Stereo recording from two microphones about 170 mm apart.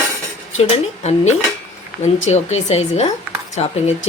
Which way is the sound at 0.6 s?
40° left (ahead or behind).